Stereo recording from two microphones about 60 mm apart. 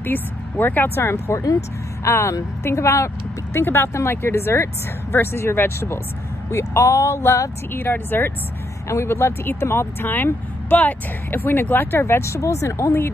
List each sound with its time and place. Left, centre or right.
0.0 s speech: left
0.9 s speech: left
3.5 s speech: left
6.5 s speech: left
7.7 s speech: left
8.8 s speech: left
12.0 s speech: left